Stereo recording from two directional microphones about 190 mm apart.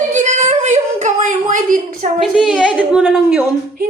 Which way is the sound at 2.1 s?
Centre (ahead or behind).